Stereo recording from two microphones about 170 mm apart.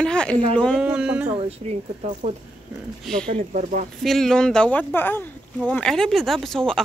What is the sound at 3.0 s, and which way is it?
Speech, 5° left (ahead or behind).